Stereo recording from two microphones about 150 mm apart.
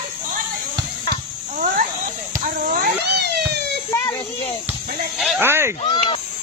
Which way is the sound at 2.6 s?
75° right (ahead or behind).